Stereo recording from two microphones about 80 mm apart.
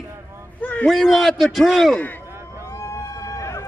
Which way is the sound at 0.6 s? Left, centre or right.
Centre.